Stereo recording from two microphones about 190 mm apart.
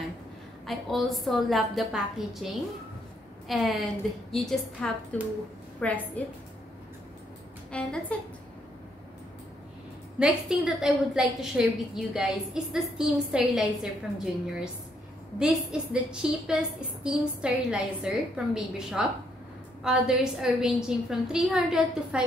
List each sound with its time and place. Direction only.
0.7 s a woman's voice: centre (ahead or behind)
7.7 s a woman's voice: 5° left (ahead or behind)
10.1 s a woman's voice: 5° right (ahead or behind)